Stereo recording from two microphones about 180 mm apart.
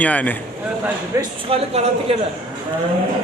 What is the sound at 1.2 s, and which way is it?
Speech, 35° right (ahead or behind).